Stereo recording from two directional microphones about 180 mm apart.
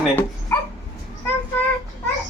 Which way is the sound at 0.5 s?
15° left (ahead or behind).